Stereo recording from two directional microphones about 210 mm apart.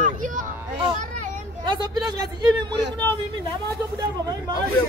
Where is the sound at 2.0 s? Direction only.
20° right (ahead or behind).